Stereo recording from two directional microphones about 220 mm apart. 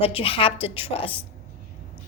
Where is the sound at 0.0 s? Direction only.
25° left (ahead or behind).